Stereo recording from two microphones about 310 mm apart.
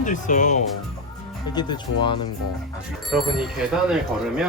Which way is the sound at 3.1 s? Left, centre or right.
Centre.